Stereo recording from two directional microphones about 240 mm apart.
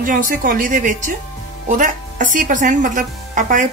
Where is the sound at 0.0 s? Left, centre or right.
Right.